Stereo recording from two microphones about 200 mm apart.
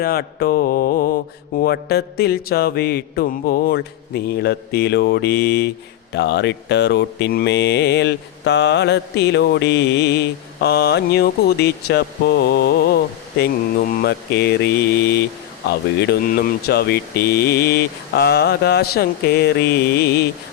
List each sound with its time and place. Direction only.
0.0 s mantra: 50° left (ahead or behind)